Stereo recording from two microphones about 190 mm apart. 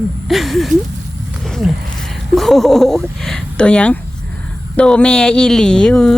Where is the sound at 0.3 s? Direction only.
Centre (ahead or behind).